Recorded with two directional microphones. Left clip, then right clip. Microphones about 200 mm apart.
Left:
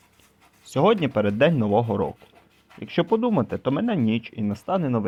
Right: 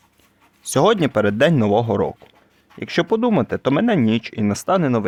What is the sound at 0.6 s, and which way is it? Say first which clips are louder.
Speech: right 4 dB; 40° right (ahead or behind).